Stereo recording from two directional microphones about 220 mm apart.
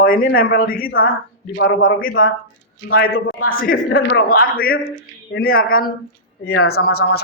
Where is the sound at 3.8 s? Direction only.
60° left (ahead or behind).